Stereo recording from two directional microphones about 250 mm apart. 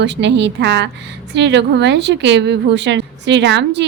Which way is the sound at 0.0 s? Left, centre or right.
Right.